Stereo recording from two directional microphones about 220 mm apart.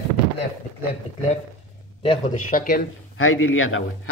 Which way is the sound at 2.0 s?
35° left (ahead or behind).